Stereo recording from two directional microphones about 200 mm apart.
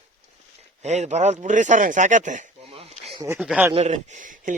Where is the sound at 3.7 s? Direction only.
35° right (ahead or behind).